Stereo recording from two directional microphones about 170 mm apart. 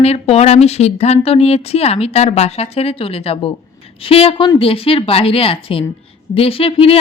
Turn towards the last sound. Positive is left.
turn(degrees=35)  # may be behind; listen again after turning